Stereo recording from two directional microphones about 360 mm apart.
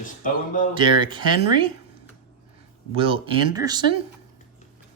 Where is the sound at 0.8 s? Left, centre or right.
Centre.